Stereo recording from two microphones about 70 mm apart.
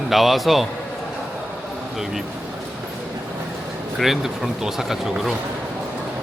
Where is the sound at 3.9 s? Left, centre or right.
Centre.